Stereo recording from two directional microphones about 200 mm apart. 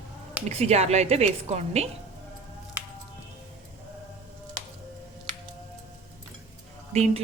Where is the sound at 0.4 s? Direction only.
35° right (ahead or behind).